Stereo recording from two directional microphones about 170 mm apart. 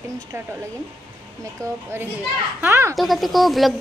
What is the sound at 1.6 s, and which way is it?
A child's voice, 20° right (ahead or behind).